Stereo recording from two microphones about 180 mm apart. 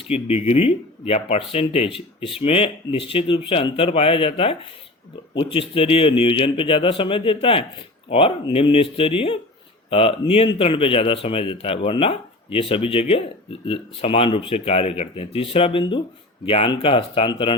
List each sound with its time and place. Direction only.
0.1 s a man's voice: 35° left (ahead or behind)